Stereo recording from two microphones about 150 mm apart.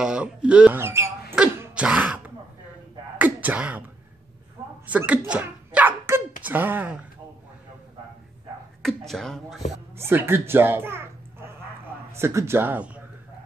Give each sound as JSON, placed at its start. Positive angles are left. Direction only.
{"t": 0.0, "sound": "speech", "side_deg": -5}
{"t": 1.6, "sound": "throat clearing", "side_deg": -5}
{"t": 4.8, "sound": "a sound", "side_deg": -10}
{"t": 6.4, "sound": "speech", "side_deg": -15}
{"t": 8.8, "sound": "speech", "side_deg": 0}
{"t": 9.9, "sound": "a child's voice", "side_deg": -15}